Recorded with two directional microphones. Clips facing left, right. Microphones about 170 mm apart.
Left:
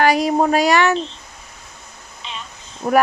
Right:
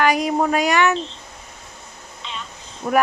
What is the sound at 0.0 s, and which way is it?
Speech, 35° left (ahead or behind).